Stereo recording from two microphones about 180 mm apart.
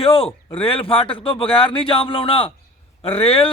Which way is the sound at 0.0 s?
30° left (ahead or behind).